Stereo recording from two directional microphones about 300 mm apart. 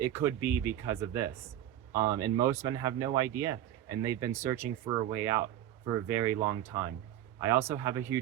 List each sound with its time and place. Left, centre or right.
0.0 s speech: centre